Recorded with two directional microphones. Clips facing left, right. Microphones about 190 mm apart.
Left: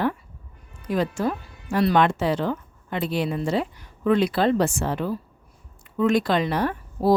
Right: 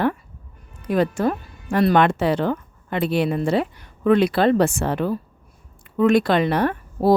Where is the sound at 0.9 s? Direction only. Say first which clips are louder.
Right 4 dB; 60° right (ahead or behind).